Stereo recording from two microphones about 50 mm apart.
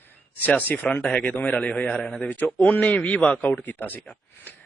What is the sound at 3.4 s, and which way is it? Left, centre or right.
Speech, left.